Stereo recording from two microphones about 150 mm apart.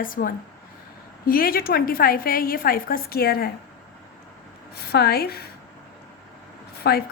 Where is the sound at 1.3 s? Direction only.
80° left.